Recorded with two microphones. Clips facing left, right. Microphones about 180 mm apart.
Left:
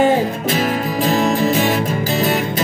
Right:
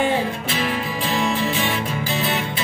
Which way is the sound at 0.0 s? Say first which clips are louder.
Left 6 dB; 40° left (ahead or behind).